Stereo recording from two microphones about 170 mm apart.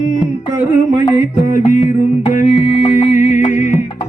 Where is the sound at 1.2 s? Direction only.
50° left (ahead or behind).